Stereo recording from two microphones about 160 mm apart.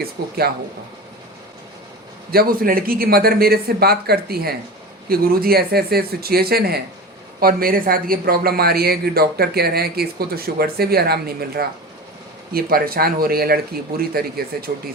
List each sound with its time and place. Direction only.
0.0 s speech: 75° right (ahead or behind)
2.3 s speech: 70° right (ahead or behind)
7.3 s speech: 65° right (ahead or behind)